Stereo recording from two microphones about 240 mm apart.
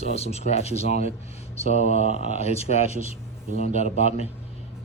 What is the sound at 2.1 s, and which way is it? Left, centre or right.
Speech, left.